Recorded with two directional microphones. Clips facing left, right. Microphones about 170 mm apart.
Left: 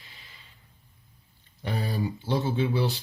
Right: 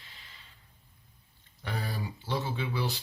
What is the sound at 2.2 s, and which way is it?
Speech, 20° left (ahead or behind).